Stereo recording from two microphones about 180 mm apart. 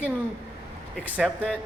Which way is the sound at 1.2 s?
5° left (ahead or behind).